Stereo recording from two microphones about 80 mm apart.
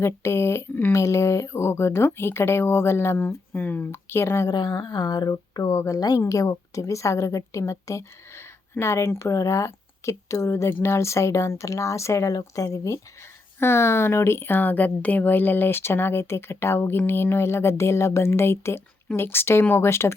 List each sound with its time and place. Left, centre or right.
0.0 s speech: left
4.4 s speech: left
12.3 s speech: left